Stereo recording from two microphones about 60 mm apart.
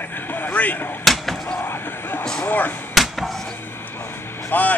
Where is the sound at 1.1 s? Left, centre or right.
Centre.